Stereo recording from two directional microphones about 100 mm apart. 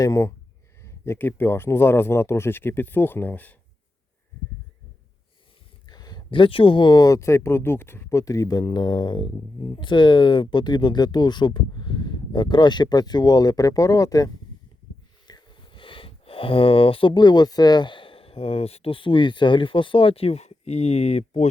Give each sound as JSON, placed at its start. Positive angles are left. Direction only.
{"t": 0.0, "sound": "speech", "side_deg": 30}
{"t": 5.8, "sound": "speech", "side_deg": 45}
{"t": 8.2, "sound": "speech", "side_deg": 35}
{"t": 15.3, "sound": "speech", "side_deg": 50}